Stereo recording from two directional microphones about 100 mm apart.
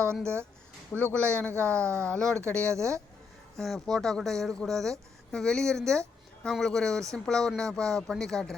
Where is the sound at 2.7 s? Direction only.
30° right (ahead or behind).